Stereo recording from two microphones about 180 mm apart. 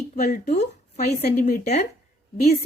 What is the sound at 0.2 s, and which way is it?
A woman's voice, 40° left (ahead or behind).